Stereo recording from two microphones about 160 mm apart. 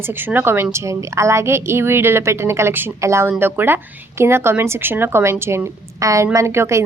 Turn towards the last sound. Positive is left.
turn(degrees=-15)  # may be behind; listen again after turning